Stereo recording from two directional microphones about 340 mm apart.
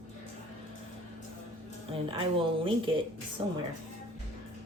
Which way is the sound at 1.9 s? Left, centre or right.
Centre.